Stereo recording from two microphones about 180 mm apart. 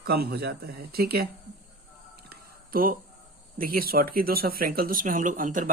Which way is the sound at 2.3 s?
55° right (ahead or behind).